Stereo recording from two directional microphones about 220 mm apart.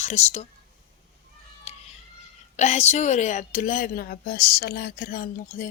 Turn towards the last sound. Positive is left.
turn(degrees=40)  # may be behind; listen again after turning